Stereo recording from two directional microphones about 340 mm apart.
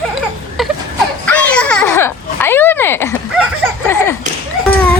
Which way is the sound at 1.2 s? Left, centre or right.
Centre.